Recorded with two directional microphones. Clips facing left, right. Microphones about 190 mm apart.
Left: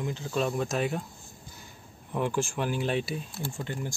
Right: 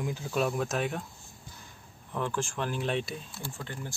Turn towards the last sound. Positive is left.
turn(degrees=20)  # may be behind; listen again after turning